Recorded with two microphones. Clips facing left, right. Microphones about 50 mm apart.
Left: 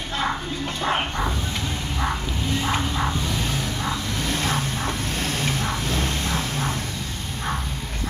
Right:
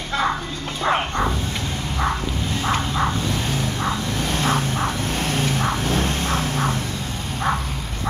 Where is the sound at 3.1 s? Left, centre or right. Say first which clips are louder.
Right 2 dB; right.